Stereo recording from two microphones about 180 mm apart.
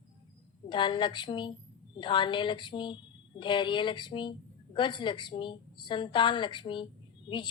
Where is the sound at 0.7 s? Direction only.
25° left (ahead or behind).